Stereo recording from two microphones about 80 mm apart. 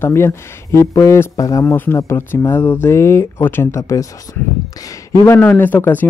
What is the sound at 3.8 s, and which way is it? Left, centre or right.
Speech, left.